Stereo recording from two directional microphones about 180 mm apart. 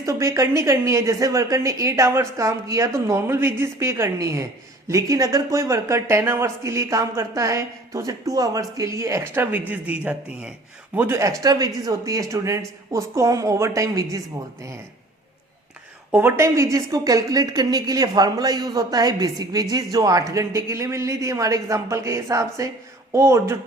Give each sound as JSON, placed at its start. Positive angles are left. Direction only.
{"t": 0.0, "sound": "speech", "side_deg": -15}
{"t": 16.1, "sound": "a woman's voice", "side_deg": -15}